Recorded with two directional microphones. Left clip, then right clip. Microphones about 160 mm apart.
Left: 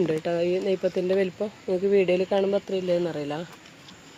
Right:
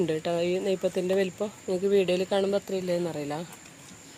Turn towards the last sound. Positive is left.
turn(degrees=20)  # may be behind; listen again after turning